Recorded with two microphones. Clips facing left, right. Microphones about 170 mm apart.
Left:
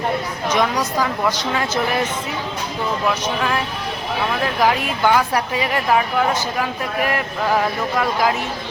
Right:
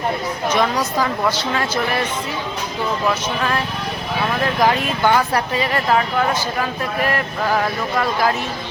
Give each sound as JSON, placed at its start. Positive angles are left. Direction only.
{"t": 0.8, "sound": "speech", "side_deg": -5}
{"t": 1.3, "sound": "speech", "side_deg": 15}
{"t": 4.6, "sound": "speech", "side_deg": 5}